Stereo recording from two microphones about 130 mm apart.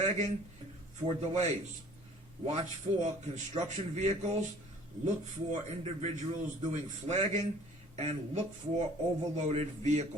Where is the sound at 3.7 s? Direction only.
65° right (ahead or behind).